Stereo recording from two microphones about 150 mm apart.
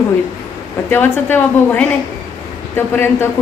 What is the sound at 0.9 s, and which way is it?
A woman's voice, 15° left (ahead or behind).